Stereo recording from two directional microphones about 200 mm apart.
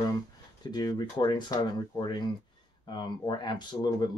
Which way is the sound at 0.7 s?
20° left (ahead or behind).